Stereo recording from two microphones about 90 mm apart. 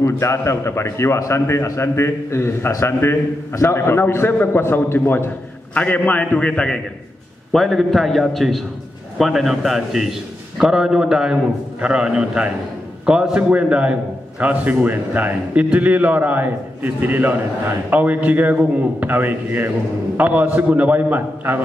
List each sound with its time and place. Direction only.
0.0 s a man's voice: 30° left (ahead or behind); by 21.5 s 20° right (ahead or behind)